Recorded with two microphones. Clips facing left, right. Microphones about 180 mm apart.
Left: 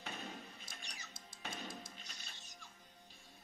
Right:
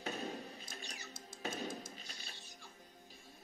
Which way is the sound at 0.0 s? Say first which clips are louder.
Right 6 dB; 40° right (ahead or behind).